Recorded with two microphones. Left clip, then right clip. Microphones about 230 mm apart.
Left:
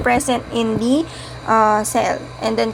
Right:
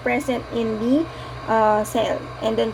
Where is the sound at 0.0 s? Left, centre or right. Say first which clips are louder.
Left 5 dB; left.